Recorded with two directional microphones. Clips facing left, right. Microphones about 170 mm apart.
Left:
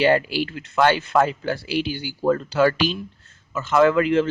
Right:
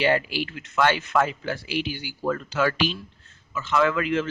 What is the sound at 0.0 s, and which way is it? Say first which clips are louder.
Speech: left 4 dB; 40° left (ahead or behind).